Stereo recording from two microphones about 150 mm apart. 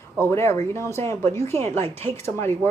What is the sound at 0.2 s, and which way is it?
Speech, 15° left (ahead or behind).